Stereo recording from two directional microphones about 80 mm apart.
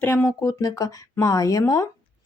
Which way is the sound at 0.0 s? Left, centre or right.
Left.